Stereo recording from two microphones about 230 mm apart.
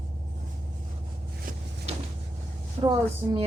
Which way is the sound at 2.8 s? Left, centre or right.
Centre.